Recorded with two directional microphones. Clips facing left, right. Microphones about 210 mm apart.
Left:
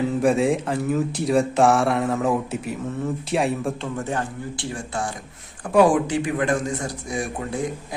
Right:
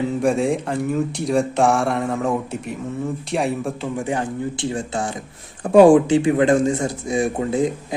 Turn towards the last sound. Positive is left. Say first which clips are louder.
# right 7 dB
turn(degrees=-20)  # may be behind; listen again after turning